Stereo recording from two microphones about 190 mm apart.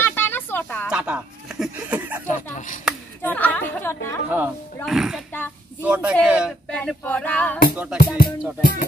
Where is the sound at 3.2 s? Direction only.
10° left (ahead or behind).